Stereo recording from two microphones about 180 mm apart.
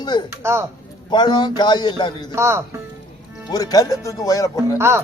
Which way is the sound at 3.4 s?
20° left (ahead or behind).